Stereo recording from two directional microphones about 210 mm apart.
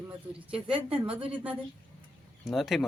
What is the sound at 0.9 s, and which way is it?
Speech, 5° right (ahead or behind).